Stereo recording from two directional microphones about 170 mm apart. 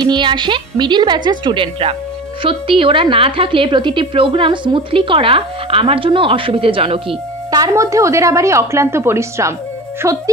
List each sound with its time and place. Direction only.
0.1 s a woman's voice: 25° right (ahead or behind)
7.6 s a woman's voice: 20° right (ahead or behind)